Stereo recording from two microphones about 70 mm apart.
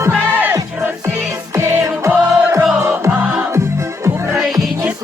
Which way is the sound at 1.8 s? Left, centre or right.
Right.